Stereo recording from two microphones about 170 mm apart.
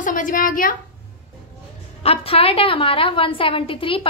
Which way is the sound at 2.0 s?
35° left (ahead or behind).